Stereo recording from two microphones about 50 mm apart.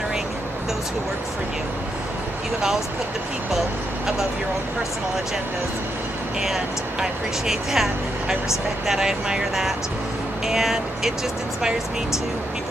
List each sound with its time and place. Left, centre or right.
6.4 s speech: centre